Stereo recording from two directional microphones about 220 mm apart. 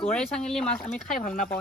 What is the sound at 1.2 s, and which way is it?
Speech, 40° left (ahead or behind).